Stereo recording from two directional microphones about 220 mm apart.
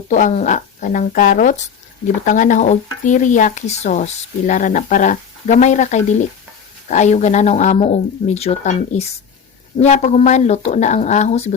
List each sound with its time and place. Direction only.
0.1 s speech: 35° left (ahead or behind)